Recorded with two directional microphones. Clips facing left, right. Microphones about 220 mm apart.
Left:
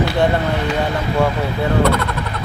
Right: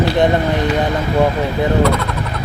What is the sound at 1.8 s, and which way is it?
Speech, centre (ahead or behind).